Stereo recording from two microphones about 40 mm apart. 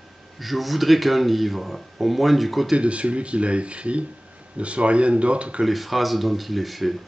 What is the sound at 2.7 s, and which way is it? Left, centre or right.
Speech, right.